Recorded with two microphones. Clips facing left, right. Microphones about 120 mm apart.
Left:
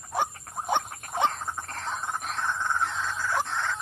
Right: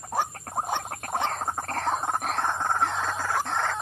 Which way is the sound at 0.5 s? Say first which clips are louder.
Right 6 dB; 55° right (ahead or behind).